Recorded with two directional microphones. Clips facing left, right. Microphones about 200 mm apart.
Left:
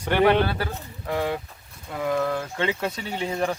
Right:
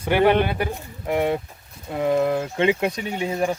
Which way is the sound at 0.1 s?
10° right (ahead or behind).